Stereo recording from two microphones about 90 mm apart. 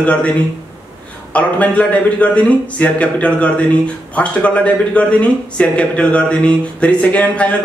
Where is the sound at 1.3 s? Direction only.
15° left (ahead or behind).